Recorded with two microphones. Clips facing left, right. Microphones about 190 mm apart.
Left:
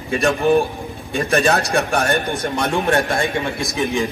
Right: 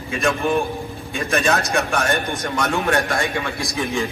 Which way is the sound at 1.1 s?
35° left (ahead or behind).